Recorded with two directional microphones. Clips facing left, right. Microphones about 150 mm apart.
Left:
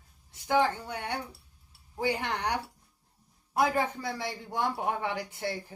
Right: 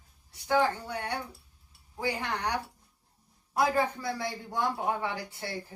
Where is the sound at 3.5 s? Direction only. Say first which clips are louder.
Even; 20° left (ahead or behind).